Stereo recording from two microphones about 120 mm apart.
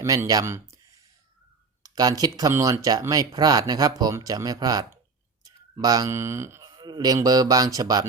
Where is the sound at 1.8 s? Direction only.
30° right (ahead or behind).